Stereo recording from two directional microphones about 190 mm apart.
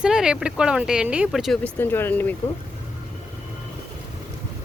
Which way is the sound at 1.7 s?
10° left (ahead or behind).